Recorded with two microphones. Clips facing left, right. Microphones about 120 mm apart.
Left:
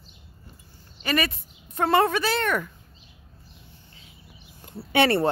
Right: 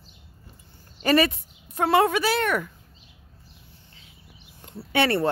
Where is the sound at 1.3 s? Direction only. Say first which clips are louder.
Even; 10° right (ahead or behind).